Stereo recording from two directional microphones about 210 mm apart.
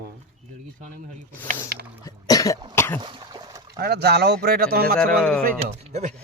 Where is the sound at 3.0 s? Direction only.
20° right (ahead or behind).